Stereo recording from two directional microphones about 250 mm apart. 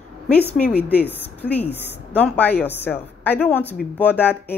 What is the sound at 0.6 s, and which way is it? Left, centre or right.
Speech, centre.